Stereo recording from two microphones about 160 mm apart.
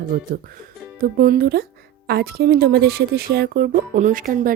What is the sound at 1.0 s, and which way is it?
A woman's voice, 65° right (ahead or behind).